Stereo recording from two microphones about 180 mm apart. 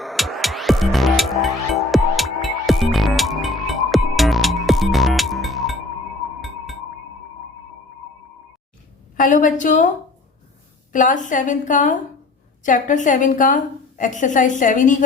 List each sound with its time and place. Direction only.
0.0 s music: centre (ahead or behind)
9.1 s a woman's voice: 45° left (ahead or behind)
10.9 s a woman's voice: 45° left (ahead or behind)